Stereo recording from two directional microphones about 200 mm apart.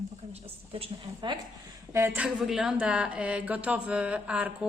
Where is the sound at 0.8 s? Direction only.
20° right (ahead or behind).